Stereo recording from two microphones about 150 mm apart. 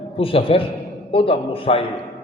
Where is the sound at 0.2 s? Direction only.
40° left (ahead or behind).